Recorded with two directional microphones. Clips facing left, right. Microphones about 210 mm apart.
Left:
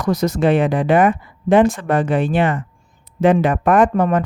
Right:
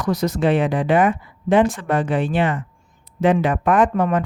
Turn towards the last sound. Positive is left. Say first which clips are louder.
# left 3 dB
turn(degrees=45)  # may be behind; listen again after turning